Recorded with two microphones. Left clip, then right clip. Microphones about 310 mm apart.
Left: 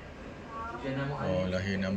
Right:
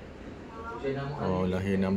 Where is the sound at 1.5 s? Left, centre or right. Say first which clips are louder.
Right 3 dB; centre.